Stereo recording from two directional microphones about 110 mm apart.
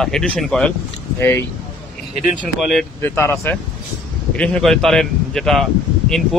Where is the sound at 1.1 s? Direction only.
25° left (ahead or behind).